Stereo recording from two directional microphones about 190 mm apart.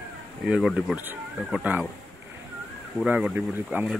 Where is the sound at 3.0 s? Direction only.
5° right (ahead or behind).